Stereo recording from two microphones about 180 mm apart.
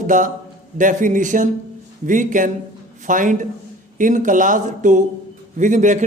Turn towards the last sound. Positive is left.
turn(degrees=-45)  # may be behind; listen again after turning